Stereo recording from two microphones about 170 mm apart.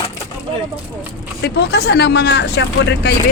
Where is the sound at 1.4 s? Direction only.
80° left.